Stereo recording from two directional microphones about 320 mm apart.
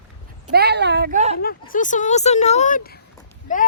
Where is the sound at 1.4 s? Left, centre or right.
Left.